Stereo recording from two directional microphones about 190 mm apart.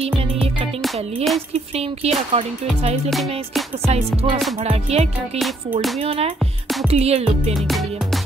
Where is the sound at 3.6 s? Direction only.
Centre (ahead or behind).